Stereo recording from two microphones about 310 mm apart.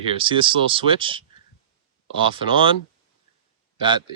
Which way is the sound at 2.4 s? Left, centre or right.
Centre.